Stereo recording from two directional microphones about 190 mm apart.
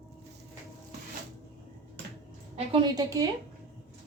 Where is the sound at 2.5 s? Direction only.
25° right (ahead or behind).